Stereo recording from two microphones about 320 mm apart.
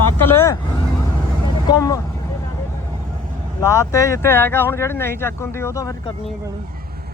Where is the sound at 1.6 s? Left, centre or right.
Centre.